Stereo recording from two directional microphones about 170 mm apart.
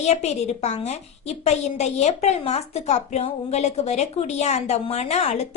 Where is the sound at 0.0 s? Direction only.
40° left (ahead or behind).